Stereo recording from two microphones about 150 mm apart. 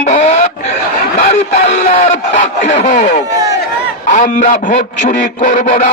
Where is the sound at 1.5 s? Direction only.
60° left (ahead or behind).